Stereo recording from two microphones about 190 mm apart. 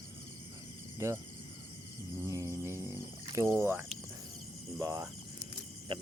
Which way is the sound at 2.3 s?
15° right (ahead or behind).